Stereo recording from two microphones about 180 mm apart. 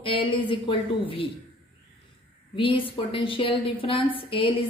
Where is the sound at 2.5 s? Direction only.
30° left (ahead or behind).